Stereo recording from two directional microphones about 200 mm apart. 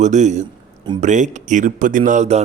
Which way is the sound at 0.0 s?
35° right (ahead or behind).